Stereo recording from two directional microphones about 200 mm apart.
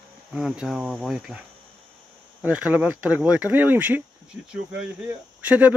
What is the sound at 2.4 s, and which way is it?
Speech, 5° right (ahead or behind).